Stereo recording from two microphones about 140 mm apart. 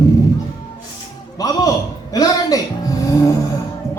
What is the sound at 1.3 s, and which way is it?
A man's voice, 25° left (ahead or behind).